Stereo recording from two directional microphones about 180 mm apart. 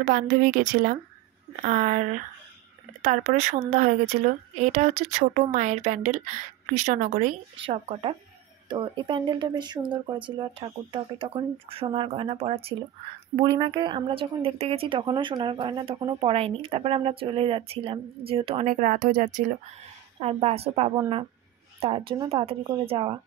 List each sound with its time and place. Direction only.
0.0 s speech: 45° right (ahead or behind)
7.5 s speech: 30° right (ahead or behind); by 19.4 s 50° right (ahead or behind)
20.2 s a woman's voice: 35° right (ahead or behind)